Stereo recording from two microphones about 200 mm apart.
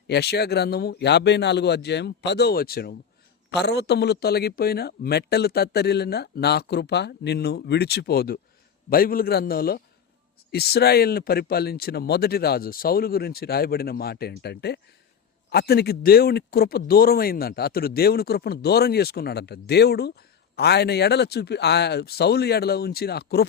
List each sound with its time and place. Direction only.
0.1 s speech: 55° left (ahead or behind)